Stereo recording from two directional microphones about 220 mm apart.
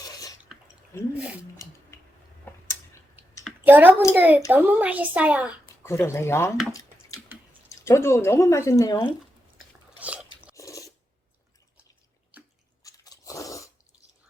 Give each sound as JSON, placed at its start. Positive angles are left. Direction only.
{"t": 0.0, "sound": "drip", "side_deg": 15}
{"t": 1.9, "sound": "a sound", "side_deg": 10}
{"t": 2.5, "sound": "tick-tock", "side_deg": 10}
{"t": 3.4, "sound": "a sound", "side_deg": -5}
{"t": 4.1, "sound": "a woman's voice", "side_deg": -10}
{"t": 5.8, "sound": "speech", "side_deg": 10}
{"t": 7.9, "sound": "speech", "side_deg": 10}
{"t": 10.0, "sound": "biting", "side_deg": -5}
{"t": 10.5, "sound": "filing", "side_deg": 15}
{"t": 12.8, "sound": "crunch", "side_deg": 15}